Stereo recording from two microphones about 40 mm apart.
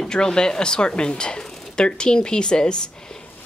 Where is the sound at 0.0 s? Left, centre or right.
Centre.